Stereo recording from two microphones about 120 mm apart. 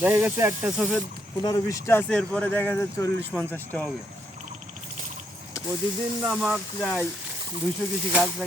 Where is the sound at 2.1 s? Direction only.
10° left (ahead or behind).